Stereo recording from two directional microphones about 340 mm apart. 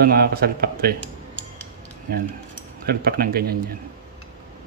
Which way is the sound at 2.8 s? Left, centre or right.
Right.